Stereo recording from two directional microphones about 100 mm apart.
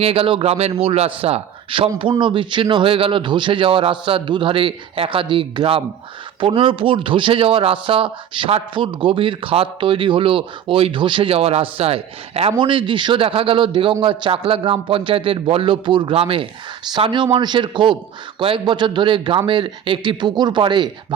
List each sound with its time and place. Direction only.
0.0 s a man's voice: 70° right (ahead or behind)
2.0 s speech: 55° right (ahead or behind); by 12.5 s 90° right
12.5 s speech: 55° right (ahead or behind)
17.3 s speech: 50° right (ahead or behind)